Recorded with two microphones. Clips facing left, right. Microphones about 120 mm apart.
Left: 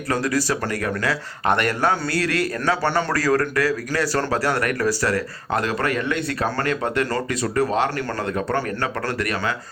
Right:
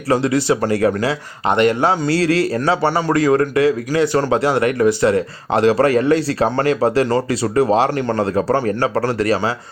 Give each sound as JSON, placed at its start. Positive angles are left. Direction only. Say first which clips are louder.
{"t": 0.1, "sound": "a man's voice", "louder": "right 6 dB", "side_deg": -25}